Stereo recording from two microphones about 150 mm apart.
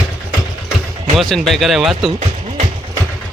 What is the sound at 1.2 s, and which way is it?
Speech, centre (ahead or behind).